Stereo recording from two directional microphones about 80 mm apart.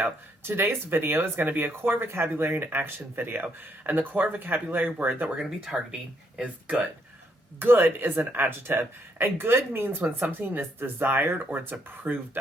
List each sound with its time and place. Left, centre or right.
0.0 s speech: right
5.4 s speech: centre
6.4 s speech: centre